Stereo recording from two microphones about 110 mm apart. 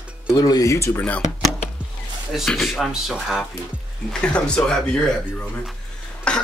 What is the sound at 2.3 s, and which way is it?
Speech, 5° left (ahead or behind).